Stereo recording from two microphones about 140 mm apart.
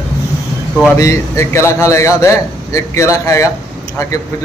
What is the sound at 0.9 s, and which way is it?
A man's voice, 20° left (ahead or behind).